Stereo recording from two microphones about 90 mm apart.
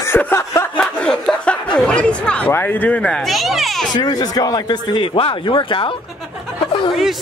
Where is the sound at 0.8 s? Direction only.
10° left (ahead or behind).